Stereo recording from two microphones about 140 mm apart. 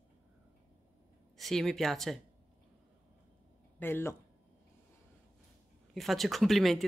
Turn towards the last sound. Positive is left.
turn(degrees=0)  # may be behind; listen again after turning